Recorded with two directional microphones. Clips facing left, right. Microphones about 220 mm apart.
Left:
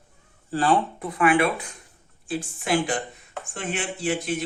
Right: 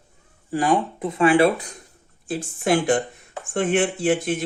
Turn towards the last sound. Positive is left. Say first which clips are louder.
# right 6 dB
turn(degrees=-50)  # may be behind; listen again after turning